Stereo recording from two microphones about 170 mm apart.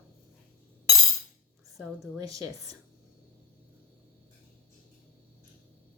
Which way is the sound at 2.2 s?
20° right (ahead or behind).